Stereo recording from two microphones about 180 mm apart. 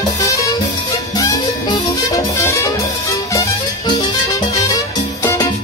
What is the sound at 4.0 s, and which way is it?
Music, 20° left (ahead or behind).